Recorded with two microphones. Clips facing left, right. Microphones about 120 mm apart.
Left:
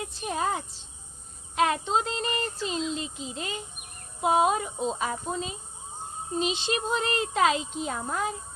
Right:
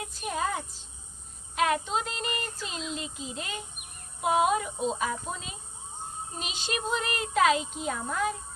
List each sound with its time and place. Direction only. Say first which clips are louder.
0.0 s speech: left 2 dB; 25° left (ahead or behind)